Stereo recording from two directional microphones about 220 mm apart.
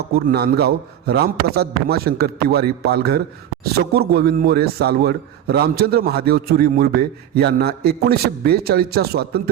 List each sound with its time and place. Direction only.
0.3 s a man's voice: 45° right (ahead or behind)